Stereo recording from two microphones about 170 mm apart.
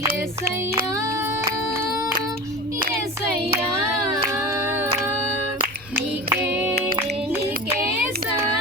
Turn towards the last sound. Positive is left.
turn(degrees=-10)  # may be behind; listen again after turning